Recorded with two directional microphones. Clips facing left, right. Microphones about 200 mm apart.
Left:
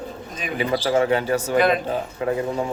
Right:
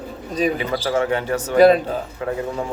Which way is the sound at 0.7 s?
20° left (ahead or behind).